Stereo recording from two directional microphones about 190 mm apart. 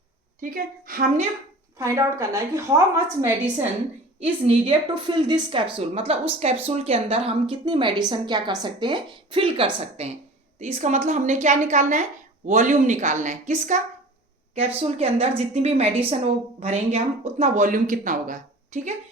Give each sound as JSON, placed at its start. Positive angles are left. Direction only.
{"t": 0.5, "sound": "a woman's voice", "side_deg": -50}
{"t": 1.8, "sound": "a woman's voice", "side_deg": -15}
{"t": 4.2, "sound": "a woman's voice", "side_deg": -30}